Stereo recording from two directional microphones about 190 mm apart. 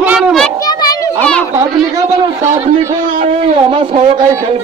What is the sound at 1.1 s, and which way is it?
Speech, 5° left (ahead or behind).